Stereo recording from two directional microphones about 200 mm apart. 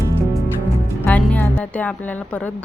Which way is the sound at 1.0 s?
10° left (ahead or behind).